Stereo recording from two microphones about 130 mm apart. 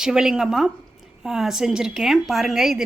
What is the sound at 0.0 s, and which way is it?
A woman's voice, 5° right (ahead or behind).